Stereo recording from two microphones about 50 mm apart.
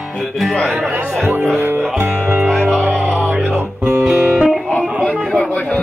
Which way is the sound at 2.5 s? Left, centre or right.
Centre.